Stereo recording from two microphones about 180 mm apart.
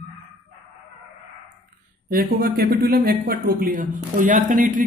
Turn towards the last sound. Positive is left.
turn(degrees=-50)  # may be behind; listen again after turning